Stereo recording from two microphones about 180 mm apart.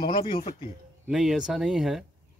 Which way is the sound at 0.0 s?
25° left (ahead or behind).